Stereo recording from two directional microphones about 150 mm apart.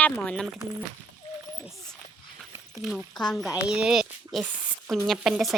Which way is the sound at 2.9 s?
5° left (ahead or behind).